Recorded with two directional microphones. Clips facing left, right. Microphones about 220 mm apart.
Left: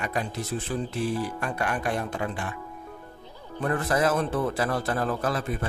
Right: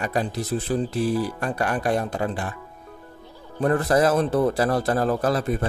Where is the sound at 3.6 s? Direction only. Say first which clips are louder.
Right 5 dB; 35° right (ahead or behind).